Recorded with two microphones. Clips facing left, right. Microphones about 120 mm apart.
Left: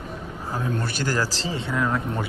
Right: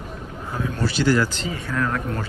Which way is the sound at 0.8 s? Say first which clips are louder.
Right 10 dB; 50° left (ahead or behind).